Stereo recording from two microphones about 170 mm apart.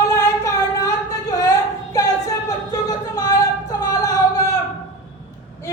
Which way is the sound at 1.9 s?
20° left (ahead or behind).